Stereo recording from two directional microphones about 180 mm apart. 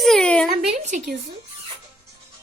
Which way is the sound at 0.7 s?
40° right (ahead or behind).